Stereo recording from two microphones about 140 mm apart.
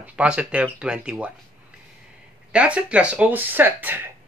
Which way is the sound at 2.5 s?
10° right (ahead or behind).